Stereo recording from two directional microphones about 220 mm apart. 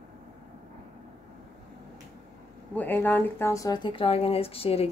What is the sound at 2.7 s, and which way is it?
Speech, 10° left (ahead or behind).